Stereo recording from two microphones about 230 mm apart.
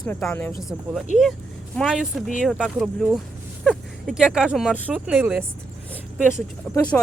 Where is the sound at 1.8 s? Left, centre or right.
Centre.